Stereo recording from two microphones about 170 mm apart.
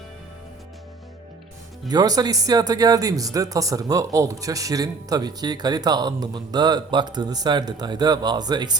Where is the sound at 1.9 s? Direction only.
20° right (ahead or behind).